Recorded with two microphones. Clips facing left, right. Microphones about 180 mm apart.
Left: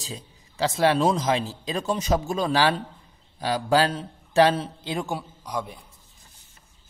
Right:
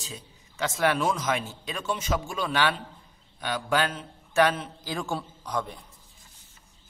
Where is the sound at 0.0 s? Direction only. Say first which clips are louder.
Left 4 dB; 35° left (ahead or behind); by 5.9 s 10° left (ahead or behind).